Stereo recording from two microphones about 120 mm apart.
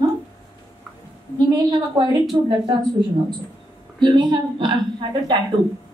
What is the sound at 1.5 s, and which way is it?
A woman's voice, 35° right (ahead or behind).